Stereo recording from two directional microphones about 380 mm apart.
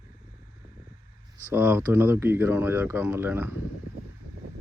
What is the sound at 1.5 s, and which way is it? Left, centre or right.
Speech, centre.